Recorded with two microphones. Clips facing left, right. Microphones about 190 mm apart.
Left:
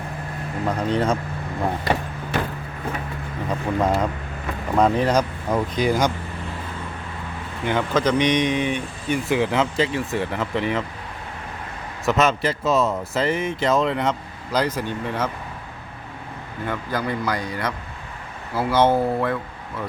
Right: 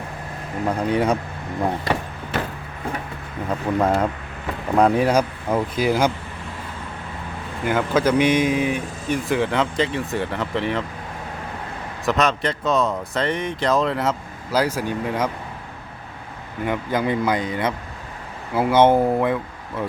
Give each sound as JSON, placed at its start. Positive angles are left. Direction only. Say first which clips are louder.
{"t": 0.7, "sound": "speech", "louder": "right 2 dB", "side_deg": -10}
{"t": 3.8, "sound": "speech", "louder": "right 2 dB", "side_deg": -5}
{"t": 7.6, "sound": "speech", "louder": "right 1 dB", "side_deg": -5}
{"t": 12.0, "sound": "speech", "louder": "left 1 dB", "side_deg": 5}
{"t": 16.6, "sound": "speech", "louder": "right 4 dB", "side_deg": -20}